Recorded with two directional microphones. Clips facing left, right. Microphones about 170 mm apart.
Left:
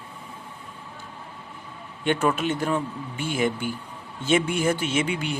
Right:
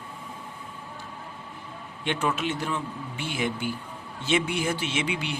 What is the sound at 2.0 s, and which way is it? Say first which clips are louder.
Speech: left 5 dB; 50° left (ahead or behind).